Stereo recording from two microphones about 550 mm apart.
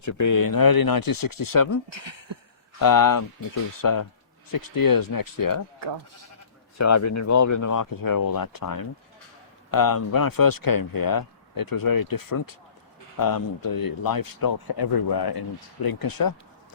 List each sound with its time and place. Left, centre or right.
0.0 s a man's voice: left
1.9 s speech: right
2.7 s a man's voice: left
6.7 s a man's voice: left